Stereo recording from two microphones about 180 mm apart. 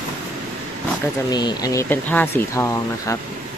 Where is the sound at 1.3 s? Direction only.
25° left (ahead or behind).